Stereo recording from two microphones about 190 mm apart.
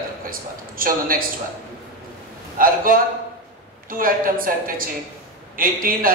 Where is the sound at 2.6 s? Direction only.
50° right (ahead or behind).